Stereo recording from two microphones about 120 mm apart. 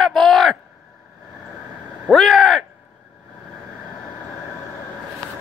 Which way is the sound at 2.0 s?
Centre (ahead or behind).